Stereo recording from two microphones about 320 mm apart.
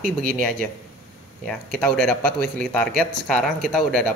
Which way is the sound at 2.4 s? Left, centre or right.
Right.